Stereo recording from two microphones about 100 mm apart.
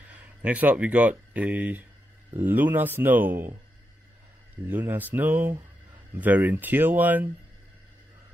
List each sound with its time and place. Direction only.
0.1 s speech: 15° right (ahead or behind)
4.6 s speech: 20° right (ahead or behind)